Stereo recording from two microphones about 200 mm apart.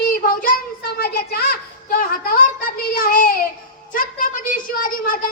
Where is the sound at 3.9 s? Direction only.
45° left (ahead or behind).